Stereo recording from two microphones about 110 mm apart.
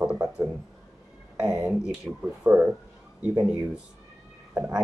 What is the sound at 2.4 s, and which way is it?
Speech, 15° right (ahead or behind).